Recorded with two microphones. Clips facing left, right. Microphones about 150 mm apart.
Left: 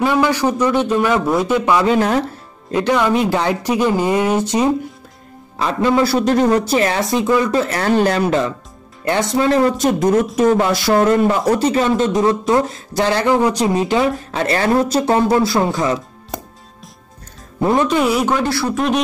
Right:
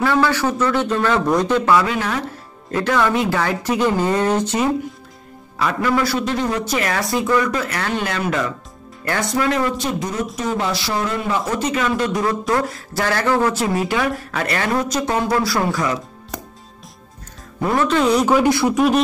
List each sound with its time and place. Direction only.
0.0 s speech: 15° left (ahead or behind)
1.9 s speech: 35° left (ahead or behind)
2.7 s a man's voice: 20° left (ahead or behind)
6.1 s a man's voice: 45° left (ahead or behind)
9.8 s speech: 50° left (ahead or behind)
11.5 s a man's voice: 30° left (ahead or behind)
17.6 s speech: 20° left (ahead or behind)
18.2 s speech: 5° right (ahead or behind)
18.5 s speech: 20° right (ahead or behind)